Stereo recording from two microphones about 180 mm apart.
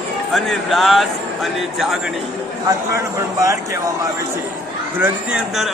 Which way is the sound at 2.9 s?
15° right (ahead or behind).